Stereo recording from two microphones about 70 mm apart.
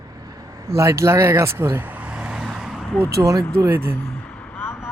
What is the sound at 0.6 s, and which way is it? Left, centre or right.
Speech, right.